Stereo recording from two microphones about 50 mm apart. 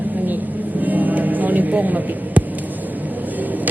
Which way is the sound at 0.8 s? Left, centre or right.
Right.